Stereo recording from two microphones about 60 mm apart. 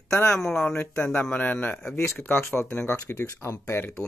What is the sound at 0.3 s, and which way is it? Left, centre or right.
Speech, centre.